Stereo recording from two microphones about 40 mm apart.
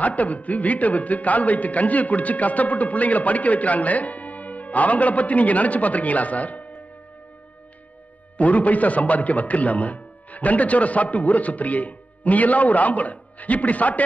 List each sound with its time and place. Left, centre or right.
0.0 s speech: left
8.4 s speech: left